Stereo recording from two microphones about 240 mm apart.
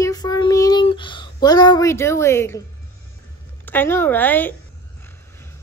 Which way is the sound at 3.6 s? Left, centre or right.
Centre.